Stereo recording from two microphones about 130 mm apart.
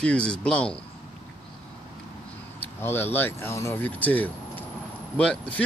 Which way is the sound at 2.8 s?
15° left (ahead or behind).